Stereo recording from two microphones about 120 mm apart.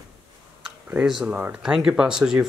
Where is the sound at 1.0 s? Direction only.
5° right (ahead or behind).